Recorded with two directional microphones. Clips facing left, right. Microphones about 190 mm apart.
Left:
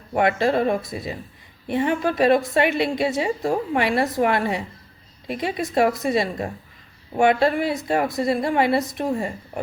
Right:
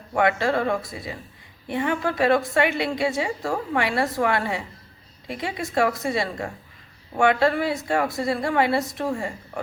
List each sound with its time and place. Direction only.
0.1 s a woman's voice: 20° left (ahead or behind)